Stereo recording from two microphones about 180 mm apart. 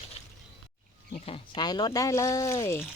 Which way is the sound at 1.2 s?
30° left (ahead or behind).